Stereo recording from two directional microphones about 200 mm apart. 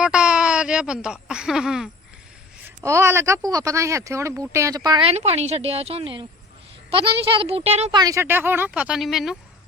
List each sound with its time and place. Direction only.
0.0 s a sound: 5° right (ahead or behind)
2.6 s a woman's voice: 15° right (ahead or behind); by 7.9 s 30° right (ahead or behind)
7.9 s speech: 15° right (ahead or behind); by 9.4 s centre (ahead or behind)